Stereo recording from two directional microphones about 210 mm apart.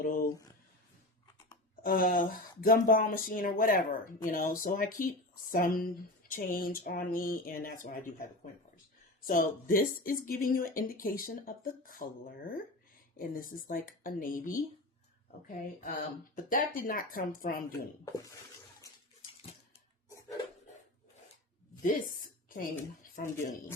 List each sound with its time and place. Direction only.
0.0 s a sound: 40° left (ahead or behind)
1.8 s speech: 40° left (ahead or behind)
16.3 s speech: 40° left (ahead or behind)
17.7 s speech: 15° left (ahead or behind)
21.8 s a sound: 40° left (ahead or behind)
23.1 s speech: 40° left (ahead or behind)